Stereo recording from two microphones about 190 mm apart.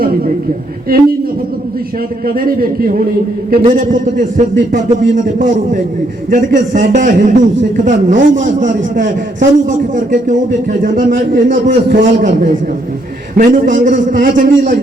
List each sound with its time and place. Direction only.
2.2 s a man's voice: 50° right (ahead or behind)